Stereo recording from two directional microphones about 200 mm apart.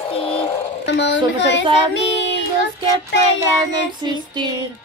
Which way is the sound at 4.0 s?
20° right (ahead or behind).